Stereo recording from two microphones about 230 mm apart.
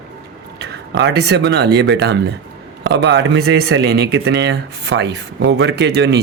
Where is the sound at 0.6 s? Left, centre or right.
Right.